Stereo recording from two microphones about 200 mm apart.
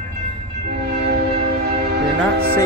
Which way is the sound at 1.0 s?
55° right (ahead or behind).